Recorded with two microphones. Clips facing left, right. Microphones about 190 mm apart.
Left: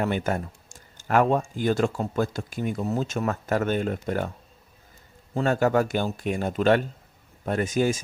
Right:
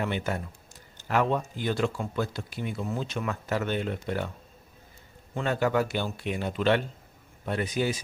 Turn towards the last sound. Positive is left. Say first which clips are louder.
# left 5 dB
turn(degrees=45)  # may be behind; listen again after turning